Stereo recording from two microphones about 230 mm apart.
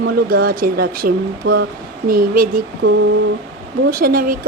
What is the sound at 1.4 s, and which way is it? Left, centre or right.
Speech, right.